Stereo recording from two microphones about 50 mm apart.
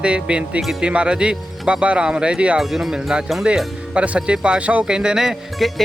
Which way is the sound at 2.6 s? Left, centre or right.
Centre.